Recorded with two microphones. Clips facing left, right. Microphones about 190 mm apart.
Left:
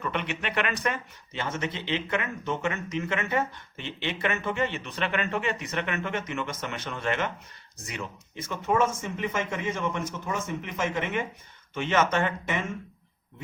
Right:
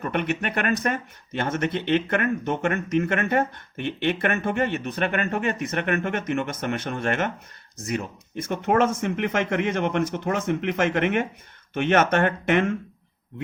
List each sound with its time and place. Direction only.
0.0 s speech: 50° right (ahead or behind)
8.6 s speech: 65° right (ahead or behind)